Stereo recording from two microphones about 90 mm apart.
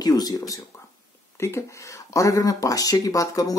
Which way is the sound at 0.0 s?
45° left (ahead or behind).